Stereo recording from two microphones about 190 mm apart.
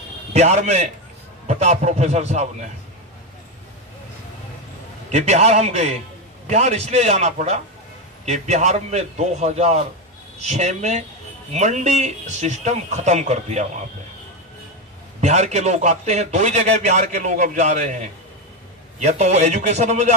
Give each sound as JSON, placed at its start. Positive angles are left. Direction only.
{"t": 0.3, "sound": "a man's voice", "side_deg": -35}
{"t": 5.1, "sound": "a man's voice", "side_deg": -35}
{"t": 15.1, "sound": "a man's voice", "side_deg": -35}